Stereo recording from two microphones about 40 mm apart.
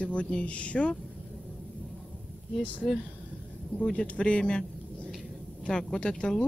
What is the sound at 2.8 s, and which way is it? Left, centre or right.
Speech, centre.